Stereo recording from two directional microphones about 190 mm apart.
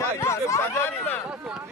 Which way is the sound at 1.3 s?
5° right (ahead or behind).